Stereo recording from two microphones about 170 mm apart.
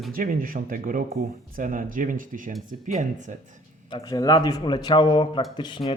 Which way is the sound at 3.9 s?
20° left (ahead or behind).